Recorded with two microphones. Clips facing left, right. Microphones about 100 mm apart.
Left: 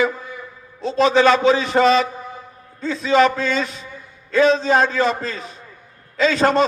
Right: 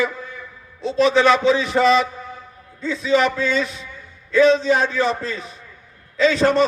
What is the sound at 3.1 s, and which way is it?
Speech, 90° left.